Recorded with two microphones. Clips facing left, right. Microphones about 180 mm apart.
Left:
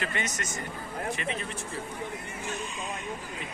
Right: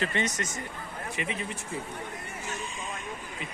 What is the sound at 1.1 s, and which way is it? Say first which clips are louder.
Speech: even; 15° right (ahead or behind).